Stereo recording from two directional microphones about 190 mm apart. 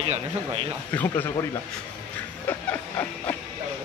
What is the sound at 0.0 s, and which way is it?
Speech, 30° right (ahead or behind).